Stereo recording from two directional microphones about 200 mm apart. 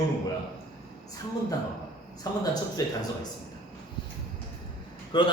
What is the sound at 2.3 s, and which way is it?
Speech, 20° left (ahead or behind).